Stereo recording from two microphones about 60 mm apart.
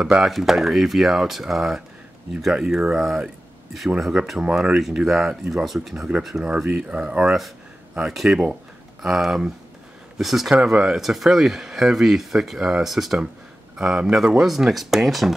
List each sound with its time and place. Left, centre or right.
0.2 s speech: centre
8.1 s speech: centre